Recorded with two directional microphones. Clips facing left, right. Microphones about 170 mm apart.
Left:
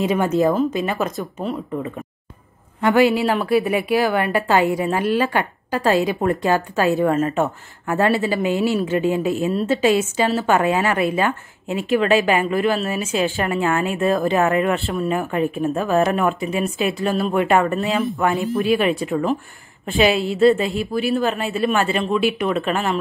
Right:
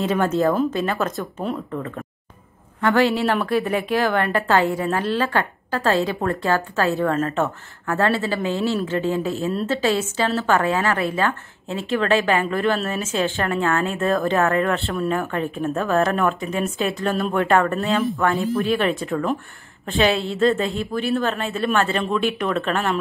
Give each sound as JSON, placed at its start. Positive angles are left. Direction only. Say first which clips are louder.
{"t": 0.0, "sound": "a woman's voice", "louder": "left 2 dB", "side_deg": 10}
{"t": 2.8, "sound": "a woman's voice", "louder": "left 3 dB", "side_deg": 15}
{"t": 14.9, "sound": "a woman's voice", "louder": "left 1 dB", "side_deg": 0}
{"t": 15.7, "sound": "a woman's voice", "louder": "even", "side_deg": 10}
{"t": 17.7, "sound": "a woman's voice", "louder": "even", "side_deg": 0}
{"t": 18.2, "sound": "a woman's voice", "louder": "left 1 dB", "side_deg": 20}
{"t": 18.5, "sound": "a woman's voice", "louder": "left 2 dB", "side_deg": 0}
{"t": 18.8, "sound": "a woman's voice", "louder": "left 2 dB", "side_deg": 10}